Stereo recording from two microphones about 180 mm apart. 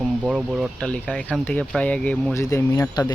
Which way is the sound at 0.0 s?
5° right (ahead or behind).